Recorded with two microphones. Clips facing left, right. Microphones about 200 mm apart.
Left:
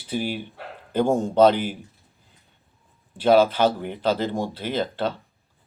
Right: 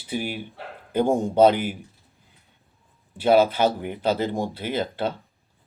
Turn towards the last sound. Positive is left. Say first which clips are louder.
# left 1 dB
turn(degrees=-10)  # may be behind; listen again after turning